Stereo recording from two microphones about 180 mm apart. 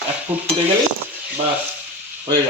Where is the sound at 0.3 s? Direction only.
10° right (ahead or behind).